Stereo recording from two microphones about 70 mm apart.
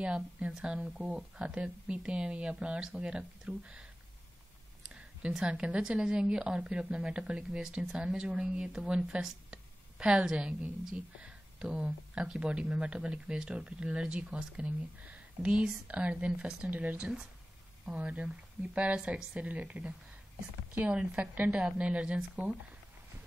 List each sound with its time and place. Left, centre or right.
0.0 s speech: centre
4.8 s a woman's voice: centre